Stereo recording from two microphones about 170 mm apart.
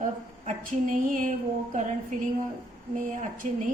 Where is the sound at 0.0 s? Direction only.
50° right (ahead or behind).